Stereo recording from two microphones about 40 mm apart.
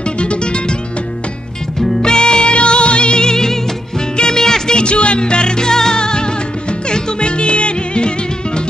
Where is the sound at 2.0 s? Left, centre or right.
Left.